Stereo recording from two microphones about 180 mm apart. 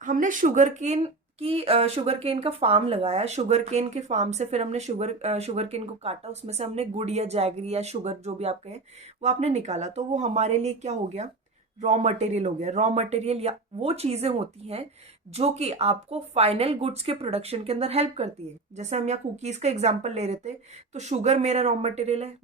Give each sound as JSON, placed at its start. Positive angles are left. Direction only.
{"t": 0.0, "sound": "speech", "side_deg": -45}